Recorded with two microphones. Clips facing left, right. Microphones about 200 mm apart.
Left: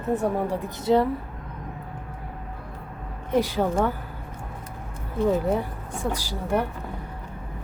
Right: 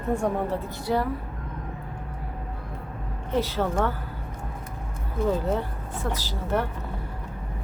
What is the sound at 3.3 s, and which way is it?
Speech, 15° left (ahead or behind).